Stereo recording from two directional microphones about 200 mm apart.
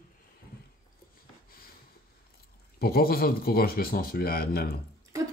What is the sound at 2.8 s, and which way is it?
Speech, 50° left (ahead or behind).